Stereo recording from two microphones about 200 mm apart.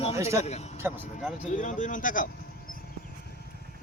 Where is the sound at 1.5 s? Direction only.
40° left (ahead or behind).